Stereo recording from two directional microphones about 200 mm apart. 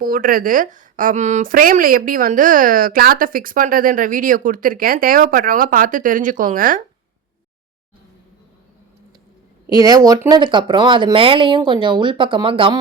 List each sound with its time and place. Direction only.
0.0 s a woman's voice: 45° right (ahead or behind)
9.6 s speech: 20° right (ahead or behind)